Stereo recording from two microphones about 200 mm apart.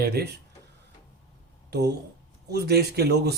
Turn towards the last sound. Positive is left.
turn(degrees=-55)  # may be behind; listen again after turning